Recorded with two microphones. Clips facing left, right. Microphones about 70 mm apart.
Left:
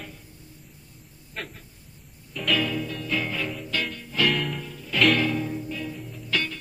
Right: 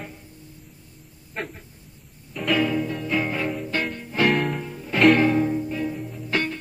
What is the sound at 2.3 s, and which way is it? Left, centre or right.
Music, centre.